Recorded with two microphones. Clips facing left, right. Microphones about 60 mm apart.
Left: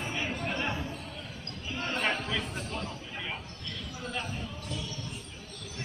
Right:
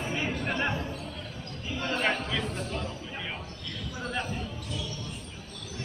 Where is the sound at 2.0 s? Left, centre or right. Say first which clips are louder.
Right 2 dB; centre.